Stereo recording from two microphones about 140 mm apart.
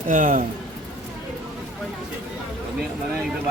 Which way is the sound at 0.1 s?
75° right (ahead or behind).